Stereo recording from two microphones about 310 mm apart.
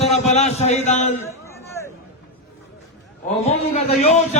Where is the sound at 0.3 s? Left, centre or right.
Left.